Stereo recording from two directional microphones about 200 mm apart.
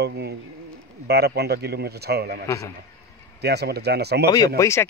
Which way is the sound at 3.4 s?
55° right (ahead or behind).